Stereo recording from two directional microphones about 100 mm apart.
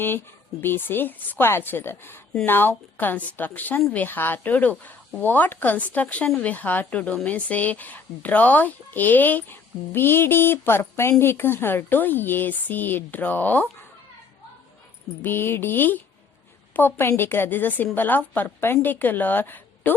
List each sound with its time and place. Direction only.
0.6 s a woman's voice: 20° left (ahead or behind)
15.2 s a woman's voice: 20° left (ahead or behind)